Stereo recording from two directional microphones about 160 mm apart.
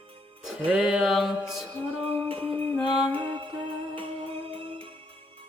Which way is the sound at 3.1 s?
30° right (ahead or behind).